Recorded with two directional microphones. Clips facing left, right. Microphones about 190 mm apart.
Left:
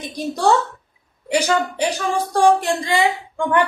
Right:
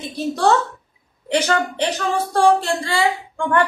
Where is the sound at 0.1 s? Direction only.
10° left (ahead or behind).